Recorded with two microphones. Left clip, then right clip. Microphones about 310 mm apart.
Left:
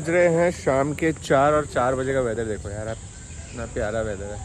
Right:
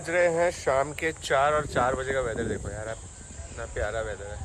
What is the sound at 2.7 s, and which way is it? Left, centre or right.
Speech, left.